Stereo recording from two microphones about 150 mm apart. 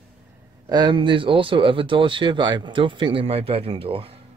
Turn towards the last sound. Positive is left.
turn(degrees=-40)  # may be behind; listen again after turning